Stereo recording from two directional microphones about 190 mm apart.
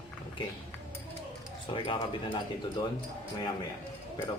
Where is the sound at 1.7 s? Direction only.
25° left (ahead or behind).